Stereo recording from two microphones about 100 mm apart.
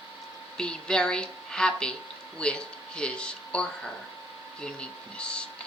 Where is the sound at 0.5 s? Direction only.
10° left (ahead or behind).